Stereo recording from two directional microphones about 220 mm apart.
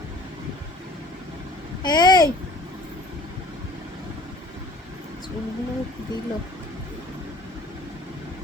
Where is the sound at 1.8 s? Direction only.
20° left (ahead or behind).